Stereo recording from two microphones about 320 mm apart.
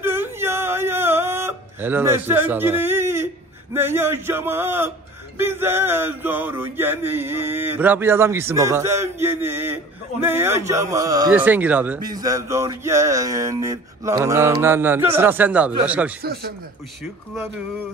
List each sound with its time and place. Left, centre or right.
0.0 s whimper: centre
3.7 s a man's voice: centre
16.2 s speech: right